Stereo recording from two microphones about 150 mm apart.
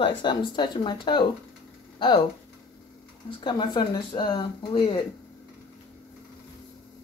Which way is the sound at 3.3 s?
35° left (ahead or behind).